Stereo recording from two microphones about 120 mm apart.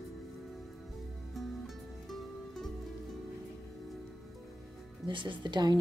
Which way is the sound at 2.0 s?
Centre (ahead or behind).